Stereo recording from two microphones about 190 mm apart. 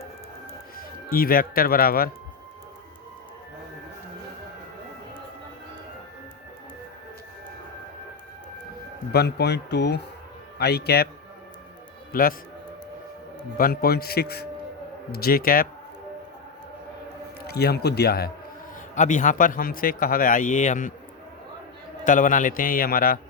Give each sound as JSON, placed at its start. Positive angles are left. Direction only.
{"t": 1.1, "sound": "speech", "side_deg": 50}
{"t": 9.1, "sound": "speech", "side_deg": 60}
{"t": 12.1, "sound": "speech", "side_deg": 45}
{"t": 13.6, "sound": "speech", "side_deg": 55}
{"t": 17.4, "sound": "speech", "side_deg": 55}
{"t": 18.9, "sound": "speech", "side_deg": 40}
{"t": 22.0, "sound": "speech", "side_deg": 45}